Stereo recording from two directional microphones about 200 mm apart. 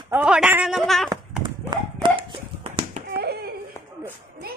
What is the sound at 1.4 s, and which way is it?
Horse, 25° right (ahead or behind).